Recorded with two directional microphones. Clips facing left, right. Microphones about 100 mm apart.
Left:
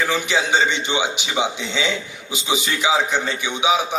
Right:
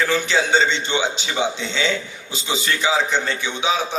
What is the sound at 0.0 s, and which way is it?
A man's voice, 15° left (ahead or behind).